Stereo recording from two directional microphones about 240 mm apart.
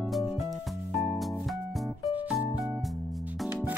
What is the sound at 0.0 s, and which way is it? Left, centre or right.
Music, centre.